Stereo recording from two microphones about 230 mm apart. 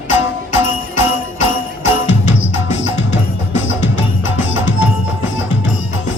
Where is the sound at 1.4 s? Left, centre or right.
Left.